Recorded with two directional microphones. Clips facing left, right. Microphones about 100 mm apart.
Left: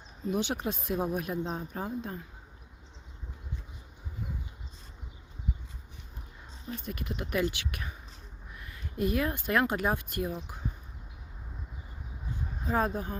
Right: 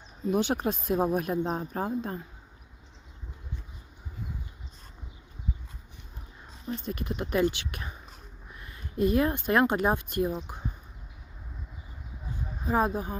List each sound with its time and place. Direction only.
0.3 s speech: 45° right (ahead or behind)
6.7 s speech: 30° right (ahead or behind)
12.6 s speech: 15° right (ahead or behind)